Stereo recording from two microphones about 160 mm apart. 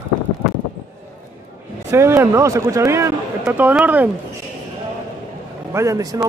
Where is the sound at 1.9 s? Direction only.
15° right (ahead or behind).